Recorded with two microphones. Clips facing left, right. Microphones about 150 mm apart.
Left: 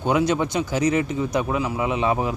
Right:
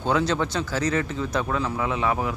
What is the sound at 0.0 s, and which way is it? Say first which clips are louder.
Speech: left 3 dB; 15° left (ahead or behind).